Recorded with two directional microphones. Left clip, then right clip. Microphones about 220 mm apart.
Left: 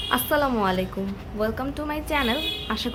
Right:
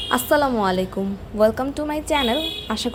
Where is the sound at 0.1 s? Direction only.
25° right (ahead or behind).